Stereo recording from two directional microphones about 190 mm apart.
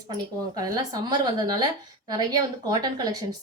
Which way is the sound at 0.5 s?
20° right (ahead or behind).